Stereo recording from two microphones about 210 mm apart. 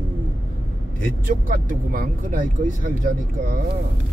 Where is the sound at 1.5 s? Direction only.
40° right (ahead or behind).